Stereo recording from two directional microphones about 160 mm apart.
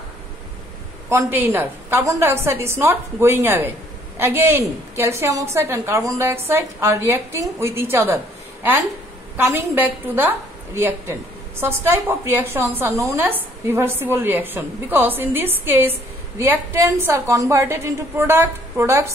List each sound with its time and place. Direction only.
1.0 s a woman's voice: 15° right (ahead or behind)
9.4 s a woman's voice: 10° right (ahead or behind)